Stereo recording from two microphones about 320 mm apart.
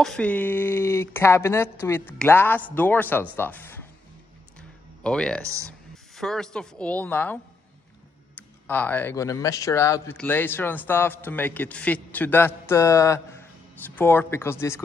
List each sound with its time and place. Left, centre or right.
0.0 s speech: centre
4.6 s music: centre
5.7 s speech: centre
8.4 s speech: centre